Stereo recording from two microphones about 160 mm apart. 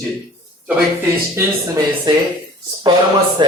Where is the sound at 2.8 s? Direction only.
30° right (ahead or behind).